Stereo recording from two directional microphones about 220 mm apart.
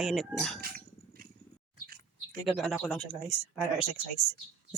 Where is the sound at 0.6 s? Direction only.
40° right (ahead or behind).